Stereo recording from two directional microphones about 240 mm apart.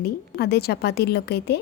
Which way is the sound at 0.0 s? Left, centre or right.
Left.